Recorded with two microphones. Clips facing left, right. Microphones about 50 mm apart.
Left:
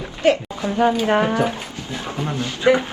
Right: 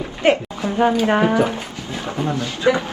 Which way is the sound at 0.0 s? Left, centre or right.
Right.